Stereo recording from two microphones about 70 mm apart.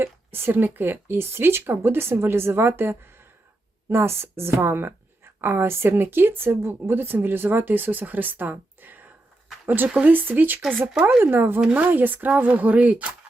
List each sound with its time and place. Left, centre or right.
0.0 s speech: right